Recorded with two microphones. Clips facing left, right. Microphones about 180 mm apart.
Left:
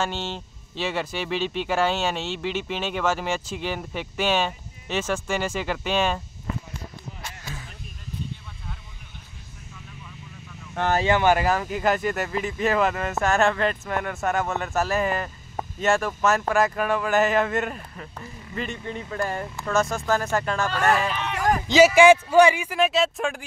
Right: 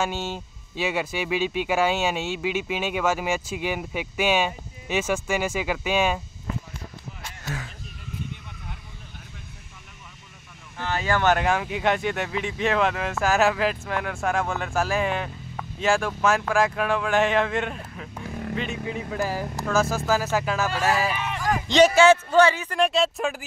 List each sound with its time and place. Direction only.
0.0 s speech: 10° right (ahead or behind)
10.8 s speech: 65° left (ahead or behind)
11.1 s speech: 10° left (ahead or behind)
18.3 s speech: 75° right (ahead or behind)
18.6 s speech: centre (ahead or behind)
21.6 s a man's voice: 5° left (ahead or behind)
22.8 s speech: centre (ahead or behind)